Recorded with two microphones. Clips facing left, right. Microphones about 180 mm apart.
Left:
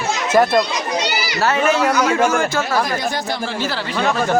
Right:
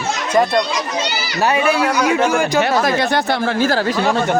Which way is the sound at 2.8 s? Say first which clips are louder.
Right 4 dB; 70° right (ahead or behind).